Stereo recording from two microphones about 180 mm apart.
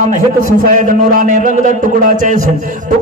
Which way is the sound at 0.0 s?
45° right (ahead or behind).